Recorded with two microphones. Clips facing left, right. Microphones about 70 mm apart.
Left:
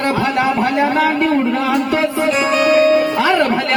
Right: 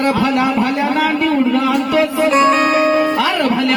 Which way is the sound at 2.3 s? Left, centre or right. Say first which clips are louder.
Right 1 dB; right.